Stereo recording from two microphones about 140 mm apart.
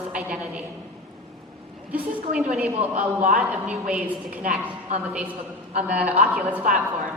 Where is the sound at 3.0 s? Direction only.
65° right (ahead or behind).